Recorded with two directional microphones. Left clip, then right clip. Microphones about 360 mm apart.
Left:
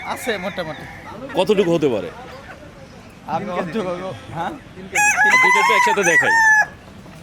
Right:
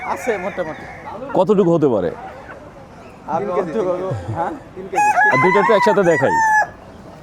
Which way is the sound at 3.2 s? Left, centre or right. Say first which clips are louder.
Right 4 dB; left.